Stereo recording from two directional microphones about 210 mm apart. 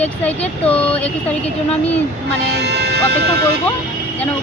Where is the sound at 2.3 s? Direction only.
55° right (ahead or behind).